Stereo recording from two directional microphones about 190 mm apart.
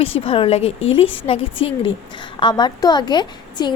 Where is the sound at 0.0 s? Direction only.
30° left (ahead or behind).